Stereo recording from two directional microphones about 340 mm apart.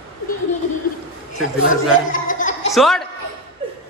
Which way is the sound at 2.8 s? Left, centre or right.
Centre.